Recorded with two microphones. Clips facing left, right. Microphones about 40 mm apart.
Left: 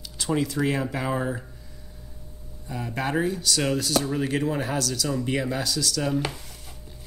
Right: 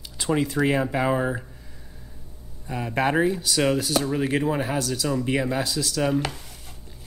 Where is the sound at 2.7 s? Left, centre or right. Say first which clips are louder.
Right 5 dB; right.